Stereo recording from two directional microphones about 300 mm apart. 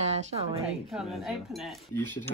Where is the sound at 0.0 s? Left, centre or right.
Centre.